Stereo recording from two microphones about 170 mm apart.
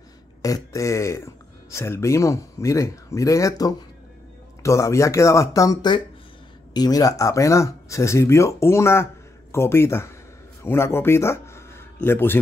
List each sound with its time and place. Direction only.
0.4 s speech: 20° left (ahead or behind)